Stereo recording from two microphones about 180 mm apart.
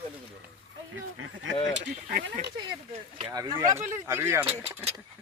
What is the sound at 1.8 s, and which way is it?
Speech, 55° right (ahead or behind).